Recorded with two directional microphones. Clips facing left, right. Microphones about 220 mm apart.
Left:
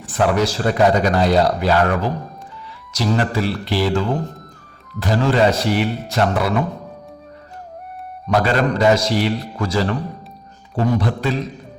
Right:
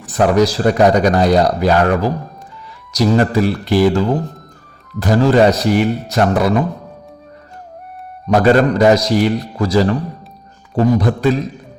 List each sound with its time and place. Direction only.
0.0 s a man's voice: 40° right (ahead or behind)
8.3 s a man's voice: 45° right (ahead or behind)